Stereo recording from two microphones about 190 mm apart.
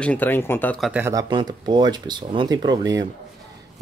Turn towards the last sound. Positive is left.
turn(degrees=-20)  # may be behind; listen again after turning